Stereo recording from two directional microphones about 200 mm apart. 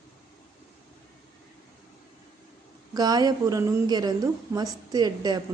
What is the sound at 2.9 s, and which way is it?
A woman's voice, 20° right (ahead or behind).